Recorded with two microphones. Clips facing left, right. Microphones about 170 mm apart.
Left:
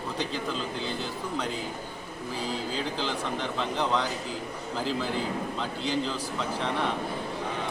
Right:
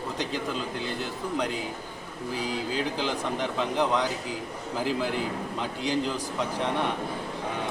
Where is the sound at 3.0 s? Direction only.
10° right (ahead or behind).